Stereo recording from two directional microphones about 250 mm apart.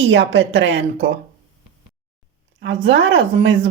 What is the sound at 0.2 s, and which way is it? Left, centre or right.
Speech, right.